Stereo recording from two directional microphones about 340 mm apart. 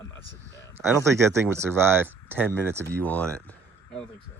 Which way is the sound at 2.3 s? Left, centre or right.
Centre.